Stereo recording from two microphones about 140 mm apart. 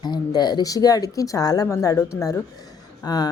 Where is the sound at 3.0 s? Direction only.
30° left (ahead or behind).